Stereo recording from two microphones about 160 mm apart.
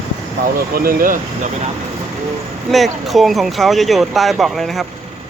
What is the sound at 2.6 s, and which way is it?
Speech, centre (ahead or behind).